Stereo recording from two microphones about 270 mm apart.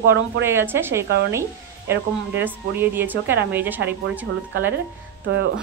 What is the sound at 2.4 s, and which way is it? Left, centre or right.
A woman's voice, centre.